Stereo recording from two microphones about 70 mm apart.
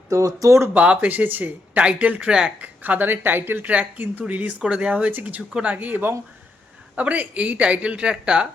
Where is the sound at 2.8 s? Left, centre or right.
Right.